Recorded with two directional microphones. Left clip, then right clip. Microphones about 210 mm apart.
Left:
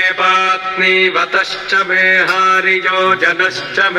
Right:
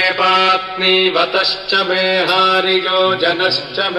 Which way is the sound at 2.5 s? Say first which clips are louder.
Left 2 dB; 20° left (ahead or behind).